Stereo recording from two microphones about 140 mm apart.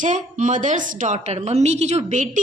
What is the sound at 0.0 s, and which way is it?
A woman's voice, 60° right (ahead or behind).